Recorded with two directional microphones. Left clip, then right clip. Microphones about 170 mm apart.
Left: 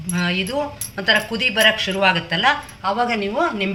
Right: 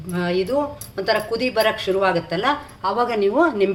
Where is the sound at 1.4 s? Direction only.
55° right (ahead or behind).